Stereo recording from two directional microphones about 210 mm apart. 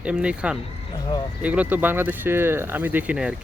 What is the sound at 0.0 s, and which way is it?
Speech, 5° right (ahead or behind).